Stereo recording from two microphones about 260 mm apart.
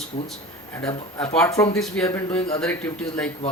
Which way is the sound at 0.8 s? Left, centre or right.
Centre.